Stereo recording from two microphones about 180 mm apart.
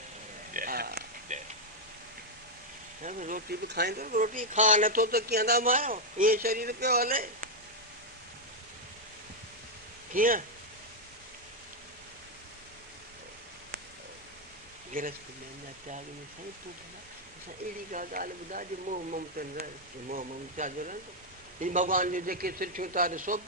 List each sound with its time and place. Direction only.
0.5 s a sound: 55° right (ahead or behind)
1.3 s a sound: 40° right (ahead or behind)
3.0 s speech: 45° right (ahead or behind)
3.7 s speech: 65° right (ahead or behind)
10.1 s speech: 50° right (ahead or behind)
14.9 s speech: 50° right (ahead or behind)
17.9 s speech: 50° right (ahead or behind)